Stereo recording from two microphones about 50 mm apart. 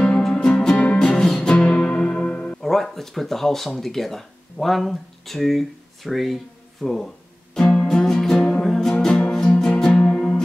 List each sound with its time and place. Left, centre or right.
0.2 s music: centre
2.6 s speech: centre
7.5 s music: centre